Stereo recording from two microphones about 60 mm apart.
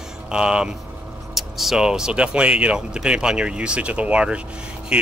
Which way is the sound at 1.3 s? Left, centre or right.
Centre.